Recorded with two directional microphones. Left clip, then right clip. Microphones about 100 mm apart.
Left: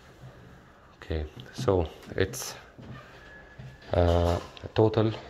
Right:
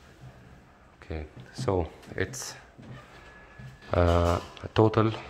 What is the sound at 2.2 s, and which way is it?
Speech, 15° left (ahead or behind).